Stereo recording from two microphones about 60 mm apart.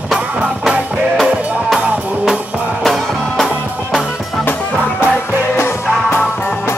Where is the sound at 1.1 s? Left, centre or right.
Centre.